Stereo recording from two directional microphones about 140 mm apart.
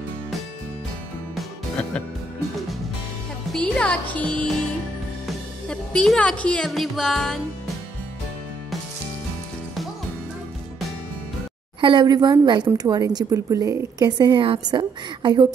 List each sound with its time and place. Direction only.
1.3 s music: 5° left (ahead or behind)
3.5 s speech: 10° left (ahead or behind)
5.7 s speech: 5° left (ahead or behind)
11.8 s a woman's voice: 35° right (ahead or behind)